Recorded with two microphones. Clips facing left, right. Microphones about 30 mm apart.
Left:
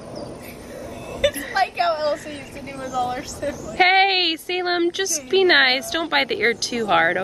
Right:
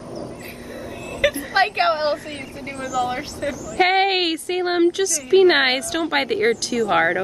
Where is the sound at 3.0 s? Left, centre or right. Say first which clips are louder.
Right 1 dB; right.